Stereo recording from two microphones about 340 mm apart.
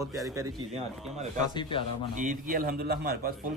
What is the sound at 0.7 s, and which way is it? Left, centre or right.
Speech, centre.